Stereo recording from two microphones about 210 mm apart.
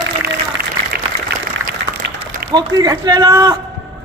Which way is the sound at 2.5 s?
20° right (ahead or behind).